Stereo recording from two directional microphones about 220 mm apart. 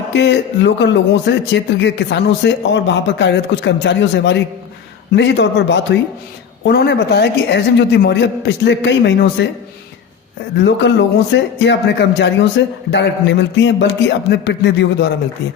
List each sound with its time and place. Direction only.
0.1 s speech: 50° left (ahead or behind)
10.6 s speech: 55° left (ahead or behind)